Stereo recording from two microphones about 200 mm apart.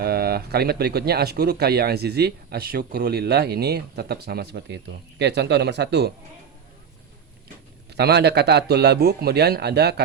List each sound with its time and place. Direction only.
0.0 s speech: 50° right (ahead or behind)
7.9 s a man's voice: 55° right (ahead or behind)